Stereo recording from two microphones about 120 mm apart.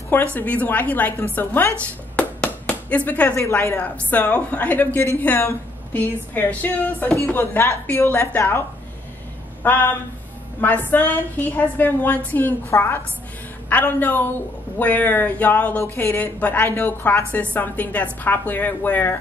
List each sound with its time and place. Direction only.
0.1 s speech: 15° left (ahead or behind)
2.1 s a sound: 10° left (ahead or behind)
2.9 s speech: 10° left (ahead or behind)